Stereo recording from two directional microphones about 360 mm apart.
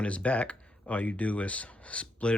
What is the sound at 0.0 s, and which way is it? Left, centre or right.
Speech, centre.